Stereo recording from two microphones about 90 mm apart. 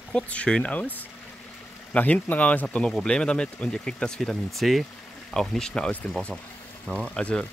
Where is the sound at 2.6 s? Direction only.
5° left (ahead or behind).